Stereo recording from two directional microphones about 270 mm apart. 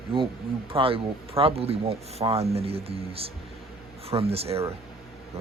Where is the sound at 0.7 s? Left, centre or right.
Centre.